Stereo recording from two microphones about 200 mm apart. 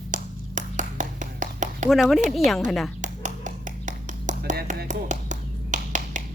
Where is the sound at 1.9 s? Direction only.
Centre (ahead or behind).